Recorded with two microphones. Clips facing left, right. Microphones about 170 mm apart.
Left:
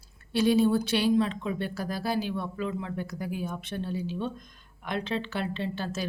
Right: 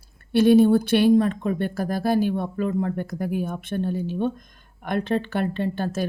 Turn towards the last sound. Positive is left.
turn(degrees=-50)  # may be behind; listen again after turning